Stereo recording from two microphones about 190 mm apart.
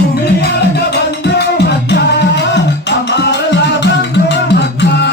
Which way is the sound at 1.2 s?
60° left (ahead or behind).